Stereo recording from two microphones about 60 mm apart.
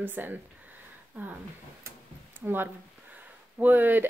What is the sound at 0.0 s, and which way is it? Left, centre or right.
Speech, right.